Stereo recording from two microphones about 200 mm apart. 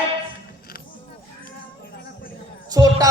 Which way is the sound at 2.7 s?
20° right (ahead or behind).